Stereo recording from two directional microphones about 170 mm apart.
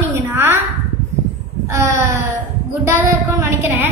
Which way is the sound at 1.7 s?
15° right (ahead or behind).